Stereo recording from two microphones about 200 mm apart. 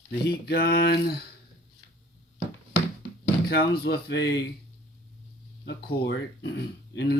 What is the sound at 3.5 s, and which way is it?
Speech, 50° left (ahead or behind).